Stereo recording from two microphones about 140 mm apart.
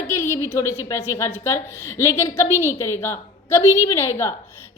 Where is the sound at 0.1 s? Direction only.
20° left (ahead or behind).